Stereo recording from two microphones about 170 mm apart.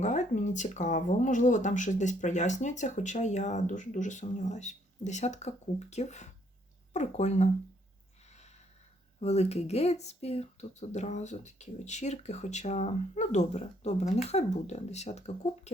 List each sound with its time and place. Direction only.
0.0 s speech: 45° left (ahead or behind)
8.3 s snort: 40° left (ahead or behind)
9.2 s speech: 40° left (ahead or behind)